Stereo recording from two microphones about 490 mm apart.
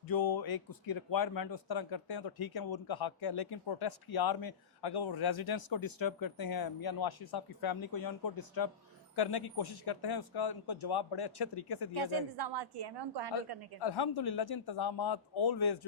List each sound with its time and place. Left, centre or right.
0.1 s speech: left
11.9 s a woman's voice: right
13.7 s speech: left